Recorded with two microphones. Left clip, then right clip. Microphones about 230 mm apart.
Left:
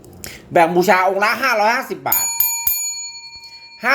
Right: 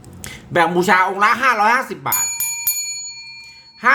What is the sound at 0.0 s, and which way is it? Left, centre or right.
Speech, centre.